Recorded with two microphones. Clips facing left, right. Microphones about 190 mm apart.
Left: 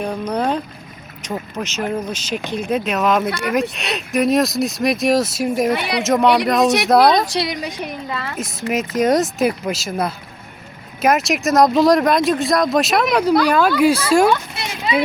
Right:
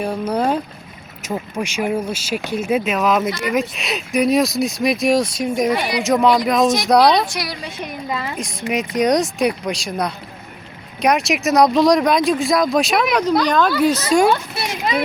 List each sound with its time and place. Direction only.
0.0 s speech: 10° right (ahead or behind)
5.7 s speech: 65° left (ahead or behind)
6.0 s speech: centre (ahead or behind)
7.3 s speech: 20° left (ahead or behind)
8.1 s speech: 15° right (ahead or behind)
8.4 s speech: centre (ahead or behind)